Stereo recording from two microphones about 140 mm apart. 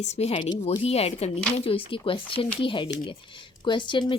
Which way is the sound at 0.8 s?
45° left (ahead or behind).